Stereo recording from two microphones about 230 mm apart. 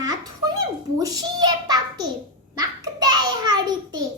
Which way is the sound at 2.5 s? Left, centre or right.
Centre.